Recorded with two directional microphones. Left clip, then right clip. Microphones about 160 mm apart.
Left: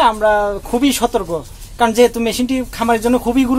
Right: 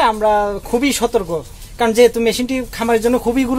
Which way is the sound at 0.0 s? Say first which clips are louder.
Left 1 dB; 5° left (ahead or behind).